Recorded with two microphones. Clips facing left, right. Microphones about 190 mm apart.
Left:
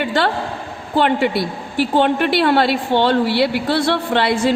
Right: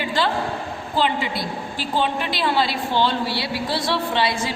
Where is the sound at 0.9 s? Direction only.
60° left (ahead or behind).